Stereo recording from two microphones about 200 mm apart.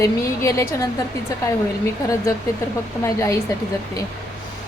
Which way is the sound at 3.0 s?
15° left (ahead or behind).